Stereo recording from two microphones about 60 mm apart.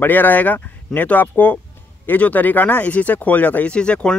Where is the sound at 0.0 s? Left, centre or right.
Left.